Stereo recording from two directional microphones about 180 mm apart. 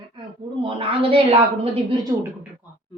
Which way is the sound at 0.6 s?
30° right (ahead or behind).